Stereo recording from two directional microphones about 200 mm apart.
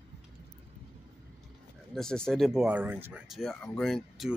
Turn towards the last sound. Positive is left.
turn(degrees=0)  # may be behind; listen again after turning